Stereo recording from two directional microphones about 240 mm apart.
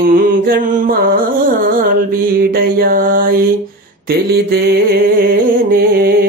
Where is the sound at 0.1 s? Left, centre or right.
Right.